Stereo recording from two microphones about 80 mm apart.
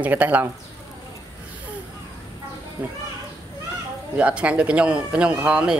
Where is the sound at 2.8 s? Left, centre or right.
Centre.